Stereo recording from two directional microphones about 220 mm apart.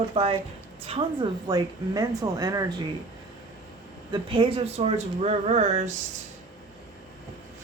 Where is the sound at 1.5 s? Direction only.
15° right (ahead or behind).